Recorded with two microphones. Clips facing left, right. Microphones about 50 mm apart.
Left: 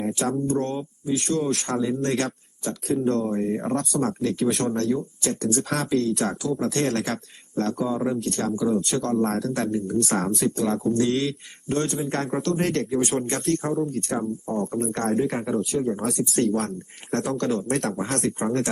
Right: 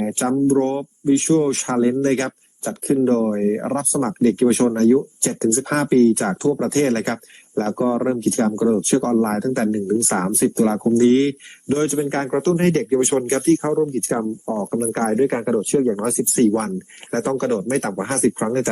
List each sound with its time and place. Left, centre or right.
0.0 s speech: right